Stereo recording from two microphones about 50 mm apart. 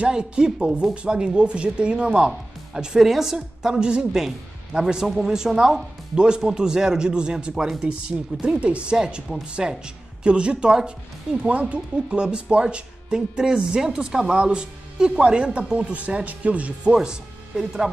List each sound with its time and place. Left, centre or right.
0.0 s a woman's voice: centre
3.3 s speech: centre
8.9 s speech: centre